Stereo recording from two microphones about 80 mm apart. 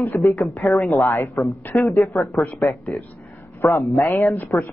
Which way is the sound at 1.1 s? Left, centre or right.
Left.